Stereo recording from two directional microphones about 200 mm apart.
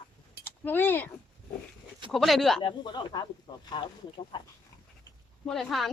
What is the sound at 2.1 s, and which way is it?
Speech, centre (ahead or behind).